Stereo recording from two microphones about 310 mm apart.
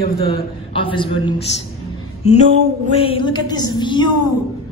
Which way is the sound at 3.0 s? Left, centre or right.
Centre.